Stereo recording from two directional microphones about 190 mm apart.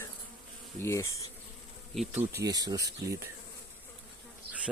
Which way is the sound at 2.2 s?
15° right (ahead or behind).